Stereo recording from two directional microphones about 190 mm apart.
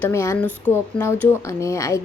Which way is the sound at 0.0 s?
15° left (ahead or behind).